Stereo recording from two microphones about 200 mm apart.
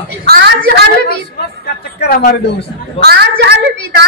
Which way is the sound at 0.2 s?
50° right (ahead or behind).